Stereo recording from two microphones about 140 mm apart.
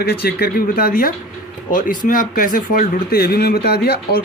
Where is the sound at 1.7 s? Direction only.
75° left (ahead or behind).